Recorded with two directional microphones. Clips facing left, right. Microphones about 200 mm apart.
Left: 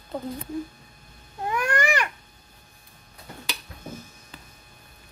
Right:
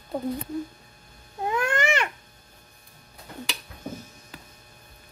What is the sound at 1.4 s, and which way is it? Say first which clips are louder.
Babbling: even; 25° right (ahead or behind).